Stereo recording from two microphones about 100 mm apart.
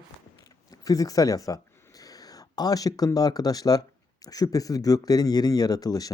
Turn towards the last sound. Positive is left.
turn(degrees=40)  # may be behind; listen again after turning